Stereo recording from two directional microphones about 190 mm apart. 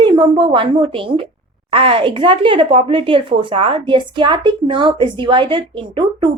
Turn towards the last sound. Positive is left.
turn(degrees=-25)  # may be behind; listen again after turning